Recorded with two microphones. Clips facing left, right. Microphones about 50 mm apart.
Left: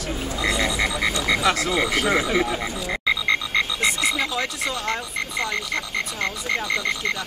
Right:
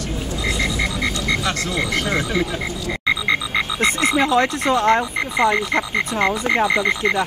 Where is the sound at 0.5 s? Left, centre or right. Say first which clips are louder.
Right 1 dB; centre.